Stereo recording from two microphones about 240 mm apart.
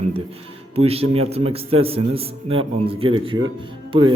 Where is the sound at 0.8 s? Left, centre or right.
Right.